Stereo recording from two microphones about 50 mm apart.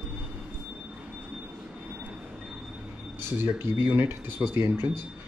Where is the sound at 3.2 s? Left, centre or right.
Right.